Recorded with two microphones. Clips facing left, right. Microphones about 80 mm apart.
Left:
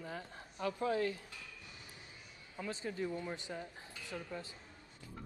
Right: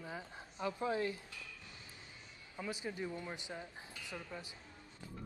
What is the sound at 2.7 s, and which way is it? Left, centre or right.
A woman's voice, centre.